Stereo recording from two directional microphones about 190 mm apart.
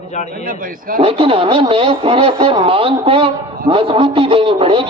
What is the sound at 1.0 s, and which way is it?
A man's voice, 30° right (ahead or behind).